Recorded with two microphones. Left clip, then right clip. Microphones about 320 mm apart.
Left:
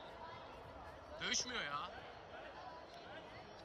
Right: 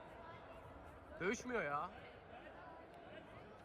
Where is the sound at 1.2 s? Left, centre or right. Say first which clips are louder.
Even; centre.